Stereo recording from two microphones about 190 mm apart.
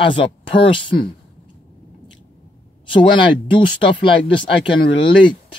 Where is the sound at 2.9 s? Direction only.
25° left (ahead or behind).